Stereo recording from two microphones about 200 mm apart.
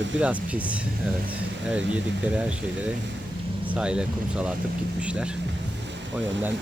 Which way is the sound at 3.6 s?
5° right (ahead or behind).